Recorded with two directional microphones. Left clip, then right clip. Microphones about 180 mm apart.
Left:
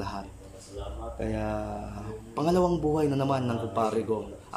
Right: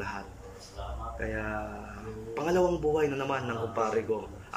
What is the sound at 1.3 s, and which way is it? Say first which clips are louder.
Speech: left 4 dB; 20° left (ahead or behind).